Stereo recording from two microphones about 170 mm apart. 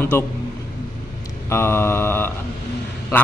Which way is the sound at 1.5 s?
15° left (ahead or behind).